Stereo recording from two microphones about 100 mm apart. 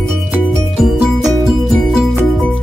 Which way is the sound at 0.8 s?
5° right (ahead or behind).